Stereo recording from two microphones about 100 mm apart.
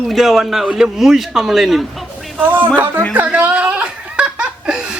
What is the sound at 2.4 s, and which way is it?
Speech, 15° right (ahead or behind).